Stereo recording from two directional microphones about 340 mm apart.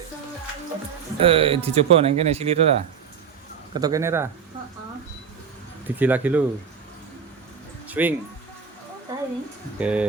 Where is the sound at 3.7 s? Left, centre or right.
Centre.